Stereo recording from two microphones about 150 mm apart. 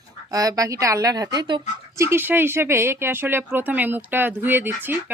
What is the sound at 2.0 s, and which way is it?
Speech, 15° right (ahead or behind).